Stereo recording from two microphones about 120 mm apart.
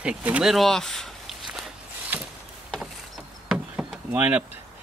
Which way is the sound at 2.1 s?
15° right (ahead or behind).